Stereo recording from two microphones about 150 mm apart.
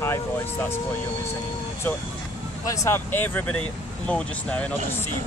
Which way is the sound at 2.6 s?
20° left (ahead or behind).